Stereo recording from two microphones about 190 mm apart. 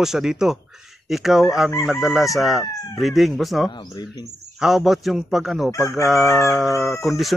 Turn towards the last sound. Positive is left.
turn(degrees=0)  # may be behind; listen again after turning